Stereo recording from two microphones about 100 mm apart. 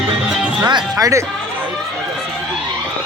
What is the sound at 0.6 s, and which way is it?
Speech, 40° right (ahead or behind).